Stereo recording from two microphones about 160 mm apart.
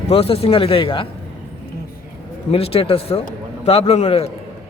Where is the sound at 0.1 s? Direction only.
35° left (ahead or behind).